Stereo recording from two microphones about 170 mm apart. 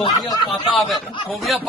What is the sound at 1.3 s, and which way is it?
Speech, centre (ahead or behind).